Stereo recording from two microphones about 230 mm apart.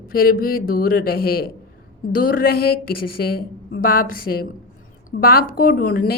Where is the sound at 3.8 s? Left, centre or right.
Left.